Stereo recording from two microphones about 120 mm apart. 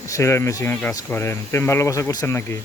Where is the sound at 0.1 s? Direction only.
25° left (ahead or behind).